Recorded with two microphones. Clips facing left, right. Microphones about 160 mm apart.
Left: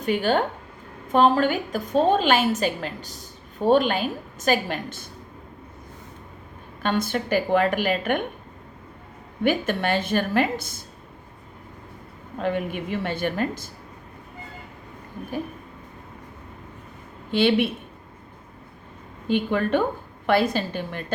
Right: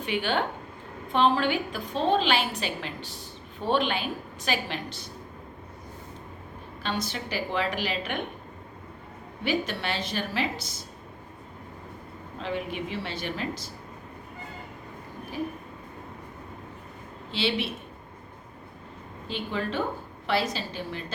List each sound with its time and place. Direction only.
0.0 s a woman's voice: 40° left (ahead or behind)
6.8 s a woman's voice: 55° left (ahead or behind)
9.4 s a woman's voice: 50° left (ahead or behind)
12.4 s a woman's voice: 55° left (ahead or behind)
17.3 s a woman's voice: 55° left (ahead or behind)
19.3 s a woman's voice: 55° left (ahead or behind)